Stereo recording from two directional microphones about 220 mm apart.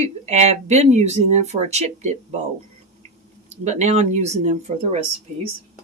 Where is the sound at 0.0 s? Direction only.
30° right (ahead or behind).